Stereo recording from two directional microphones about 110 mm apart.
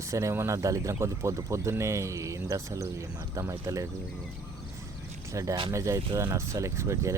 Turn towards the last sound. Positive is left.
turn(degrees=-25)  # may be behind; listen again after turning